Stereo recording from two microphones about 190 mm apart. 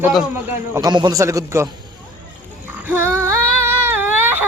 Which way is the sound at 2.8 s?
10° right (ahead or behind).